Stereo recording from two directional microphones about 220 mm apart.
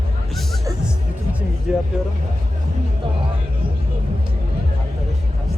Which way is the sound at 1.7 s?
5° right (ahead or behind).